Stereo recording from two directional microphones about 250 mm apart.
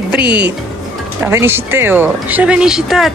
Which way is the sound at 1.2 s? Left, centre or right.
Centre.